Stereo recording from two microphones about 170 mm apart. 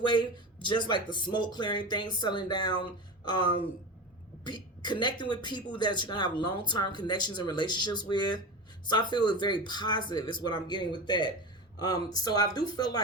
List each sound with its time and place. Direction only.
0.0 s speech: 25° left (ahead or behind)